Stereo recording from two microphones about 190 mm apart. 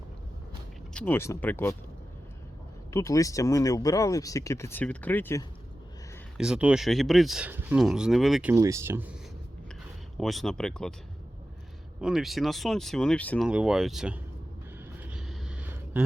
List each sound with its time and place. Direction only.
0.9 s speech: 10° left (ahead or behind)
2.9 s speech: 15° left (ahead or behind)
6.3 s speech: 5° right (ahead or behind)
10.2 s speech: centre (ahead or behind)
11.9 s speech: 5° right (ahead or behind)
13.5 s speech: 5° right (ahead or behind)
15.0 s a sound: 5° right (ahead or behind)